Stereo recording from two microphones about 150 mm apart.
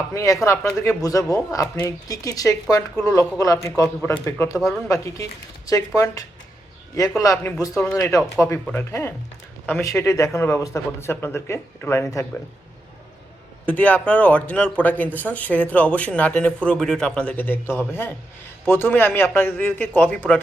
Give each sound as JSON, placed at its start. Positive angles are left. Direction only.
{"t": 0.1, "sound": "speech", "side_deg": 20}
{"t": 2.9, "sound": "speech", "side_deg": 5}
{"t": 3.2, "sound": "speech", "side_deg": 20}
{"t": 13.7, "sound": "speech", "side_deg": 10}